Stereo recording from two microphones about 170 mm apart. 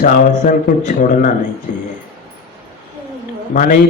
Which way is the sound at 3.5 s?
55° left (ahead or behind).